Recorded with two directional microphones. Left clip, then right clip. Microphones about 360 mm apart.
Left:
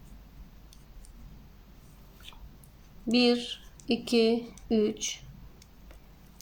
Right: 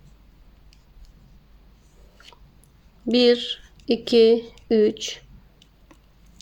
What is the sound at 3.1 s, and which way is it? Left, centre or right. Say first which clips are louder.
Speech: right 8 dB; centre.